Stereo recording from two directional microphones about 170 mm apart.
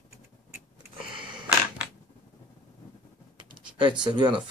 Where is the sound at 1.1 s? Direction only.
30° right (ahead or behind).